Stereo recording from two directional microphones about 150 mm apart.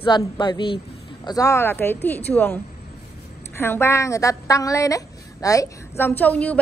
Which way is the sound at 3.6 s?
15° left (ahead or behind).